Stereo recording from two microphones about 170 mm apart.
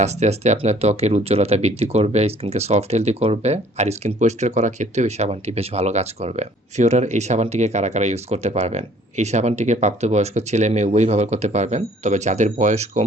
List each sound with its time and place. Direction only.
0.0 s speech: 40° right (ahead or behind)